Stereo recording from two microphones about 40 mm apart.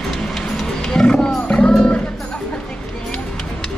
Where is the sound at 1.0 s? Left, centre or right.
Left.